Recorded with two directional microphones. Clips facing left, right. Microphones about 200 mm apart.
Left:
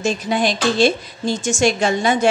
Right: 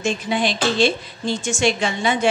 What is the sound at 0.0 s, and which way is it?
Speech, 40° left (ahead or behind).